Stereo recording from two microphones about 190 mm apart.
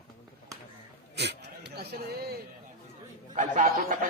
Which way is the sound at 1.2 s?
60° right (ahead or behind).